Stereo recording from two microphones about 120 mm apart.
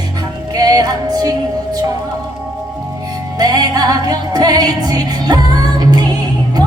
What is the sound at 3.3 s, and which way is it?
Music, 35° right (ahead or behind).